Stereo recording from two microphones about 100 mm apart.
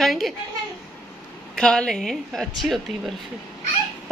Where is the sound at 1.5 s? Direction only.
5° left (ahead or behind).